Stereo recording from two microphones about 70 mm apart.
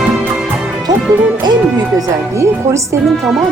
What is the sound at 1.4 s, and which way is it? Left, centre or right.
Speech, right.